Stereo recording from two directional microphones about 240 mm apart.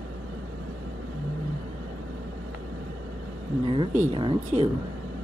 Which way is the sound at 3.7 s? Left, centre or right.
Right.